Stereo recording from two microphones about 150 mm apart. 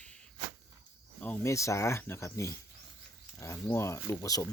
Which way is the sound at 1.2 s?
15° left (ahead or behind).